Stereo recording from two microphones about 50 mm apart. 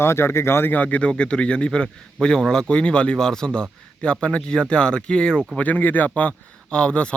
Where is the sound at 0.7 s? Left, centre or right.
Left.